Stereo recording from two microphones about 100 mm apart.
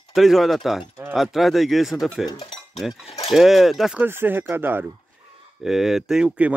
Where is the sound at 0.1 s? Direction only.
Centre (ahead or behind).